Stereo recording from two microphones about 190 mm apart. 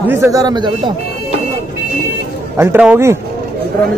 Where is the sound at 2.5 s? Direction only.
10° right (ahead or behind).